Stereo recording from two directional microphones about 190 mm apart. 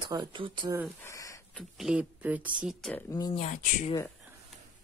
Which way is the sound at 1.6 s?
Centre (ahead or behind).